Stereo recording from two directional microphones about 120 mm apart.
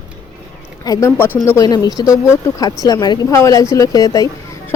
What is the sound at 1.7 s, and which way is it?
Speech, 30° left (ahead or behind).